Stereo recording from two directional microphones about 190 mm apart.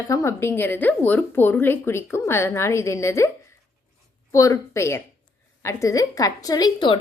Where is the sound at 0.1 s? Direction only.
15° left (ahead or behind).